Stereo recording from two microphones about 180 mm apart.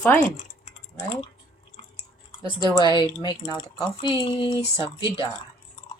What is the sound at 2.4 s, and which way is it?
Speech, 25° left (ahead or behind).